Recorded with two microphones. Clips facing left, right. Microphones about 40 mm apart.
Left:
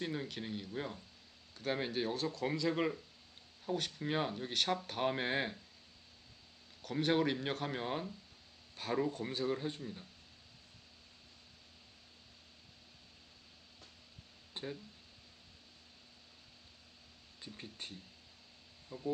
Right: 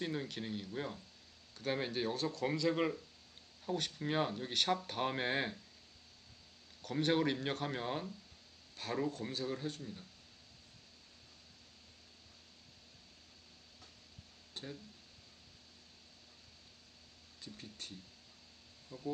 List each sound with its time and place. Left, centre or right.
0.0 s speech: centre
6.8 s speech: centre
14.5 s a sound: centre
17.4 s speech: left